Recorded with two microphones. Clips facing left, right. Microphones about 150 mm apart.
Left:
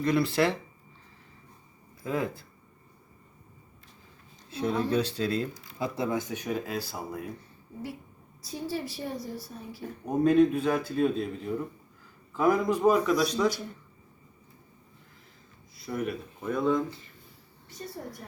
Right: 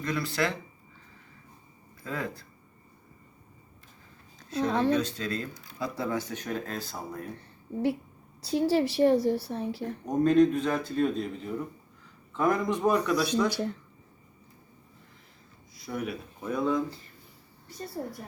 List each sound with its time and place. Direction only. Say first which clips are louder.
0.0 s speech: left 5 dB; 25° left (ahead or behind)
4.4 s a woman's voice: right 2 dB; 80° right
4.9 s speech: left 2 dB; 35° left (ahead or behind)
5.3 s speech: left 4 dB; 5° left (ahead or behind)
5.8 s speech: left 1 dB; 20° left (ahead or behind)
7.3 s a sound: right 8 dB; 70° right (ahead or behind)
8.4 s a woman's voice: right 9 dB; 75° right (ahead or behind)
10.1 s speech: even; 5° left (ahead or behind)
13.5 s a woman's voice: right 7 dB; 75° right (ahead or behind)
15.7 s speech: left 2 dB; centre (ahead or behind)